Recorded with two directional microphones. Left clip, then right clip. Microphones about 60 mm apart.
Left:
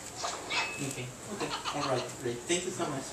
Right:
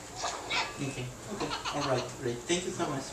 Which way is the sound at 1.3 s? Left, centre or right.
Right.